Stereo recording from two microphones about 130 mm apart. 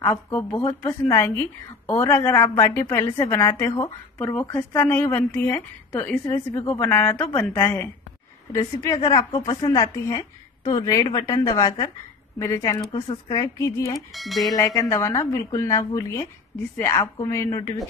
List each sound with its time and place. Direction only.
0.1 s a woman's voice: 15° left (ahead or behind)
6.3 s a woman's voice: 30° left (ahead or behind)
6.8 s a woman's voice: 15° left (ahead or behind); by 11.9 s 35° left (ahead or behind)
12.4 s a woman's voice: 25° left (ahead or behind)
13.9 s speech: centre (ahead or behind)
14.5 s a woman's voice: 30° left (ahead or behind)